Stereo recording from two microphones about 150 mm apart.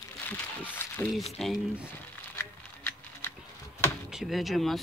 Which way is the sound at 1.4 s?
Centre (ahead or behind).